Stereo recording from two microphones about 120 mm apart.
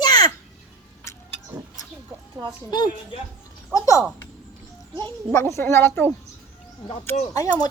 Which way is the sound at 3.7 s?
25° left (ahead or behind).